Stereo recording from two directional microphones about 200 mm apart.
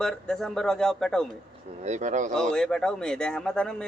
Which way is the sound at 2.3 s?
5° left (ahead or behind).